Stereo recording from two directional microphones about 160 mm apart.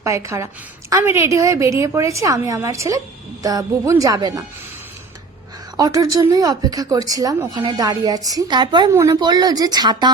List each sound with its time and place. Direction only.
0.0 s a woman's voice: 20° right (ahead or behind)
5.7 s a woman's voice: 25° right (ahead or behind)